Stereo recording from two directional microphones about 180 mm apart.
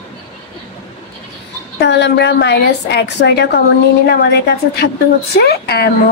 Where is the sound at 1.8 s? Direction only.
75° left (ahead or behind).